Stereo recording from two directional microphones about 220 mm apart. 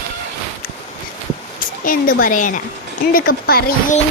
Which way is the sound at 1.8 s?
40° left (ahead or behind).